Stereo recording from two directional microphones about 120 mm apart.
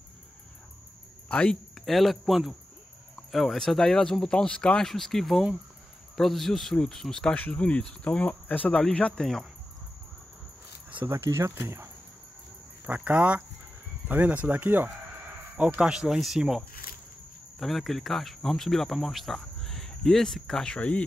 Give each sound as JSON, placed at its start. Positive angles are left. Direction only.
{"t": 1.3, "sound": "speech", "side_deg": 10}
{"t": 11.1, "sound": "speech", "side_deg": -20}